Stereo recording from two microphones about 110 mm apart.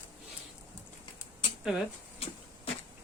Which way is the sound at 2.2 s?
65° left (ahead or behind).